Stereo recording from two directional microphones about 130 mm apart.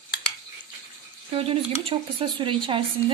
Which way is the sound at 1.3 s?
45° right (ahead or behind).